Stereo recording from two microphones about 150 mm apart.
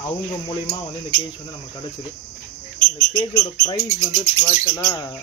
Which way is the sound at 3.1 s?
25° left (ahead or behind).